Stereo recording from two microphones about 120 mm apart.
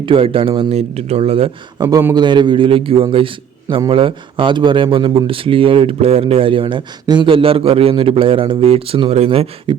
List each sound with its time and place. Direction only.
0.0 s speech: 45° right (ahead or behind)
1.8 s speech: 30° right (ahead or behind); by 9.5 s 60° right (ahead or behind)
9.7 s beatboxing: 40° right (ahead or behind)